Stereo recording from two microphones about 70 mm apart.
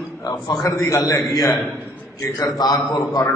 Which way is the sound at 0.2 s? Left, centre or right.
Left.